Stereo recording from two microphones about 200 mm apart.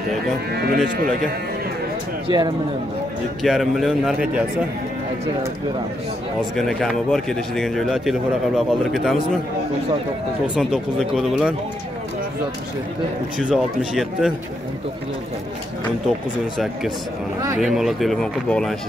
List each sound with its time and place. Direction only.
0.5 s speech: 55° right (ahead or behind)
2.2 s speech: 20° right (ahead or behind)
3.4 s a man's voice: centre (ahead or behind)
6.5 s a man's voice: centre (ahead or behind)
10.4 s a man's voice: 5° right (ahead or behind)
13.4 s a man's voice: centre (ahead or behind)
16.5 s a man's voice: centre (ahead or behind)